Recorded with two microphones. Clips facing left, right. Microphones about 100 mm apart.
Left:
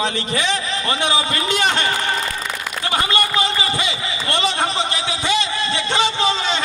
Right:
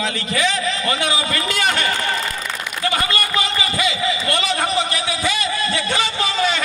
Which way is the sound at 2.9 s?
25° left (ahead or behind).